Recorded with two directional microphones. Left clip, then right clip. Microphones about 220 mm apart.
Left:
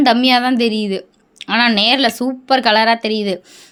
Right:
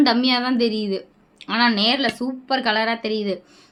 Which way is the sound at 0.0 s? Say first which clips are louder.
Left 6 dB; 35° left (ahead or behind).